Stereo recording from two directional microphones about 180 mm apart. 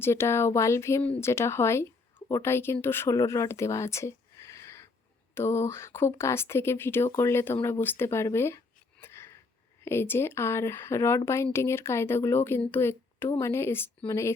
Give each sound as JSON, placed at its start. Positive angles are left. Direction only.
{"t": 0.0, "sound": "speech", "side_deg": 15}